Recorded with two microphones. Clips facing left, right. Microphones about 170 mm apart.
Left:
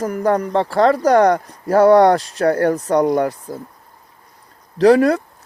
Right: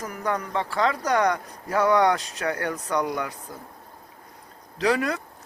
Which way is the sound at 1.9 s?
35° left (ahead or behind).